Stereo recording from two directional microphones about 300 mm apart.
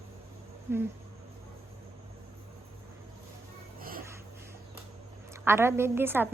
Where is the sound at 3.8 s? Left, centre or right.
Right.